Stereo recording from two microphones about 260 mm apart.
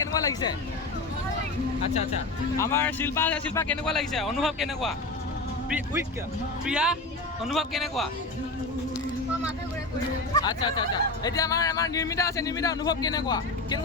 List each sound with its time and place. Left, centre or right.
0.1 s a sound: centre
2.6 s a man's voice: centre
6.7 s a man's voice: centre
10.3 s speech: centre